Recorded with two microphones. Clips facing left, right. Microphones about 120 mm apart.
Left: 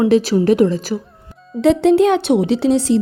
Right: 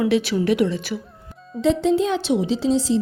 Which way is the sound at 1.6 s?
70° left (ahead or behind).